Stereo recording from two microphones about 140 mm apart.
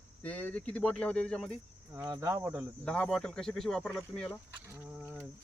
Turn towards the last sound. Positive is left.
turn(degrees=5)  # may be behind; listen again after turning